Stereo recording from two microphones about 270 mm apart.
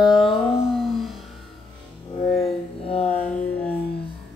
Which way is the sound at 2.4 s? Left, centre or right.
Left.